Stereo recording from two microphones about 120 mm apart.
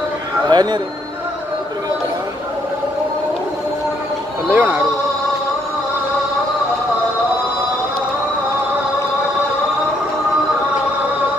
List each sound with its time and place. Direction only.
0.5 s speech: 35° right (ahead or behind)
4.6 s speech: 15° right (ahead or behind)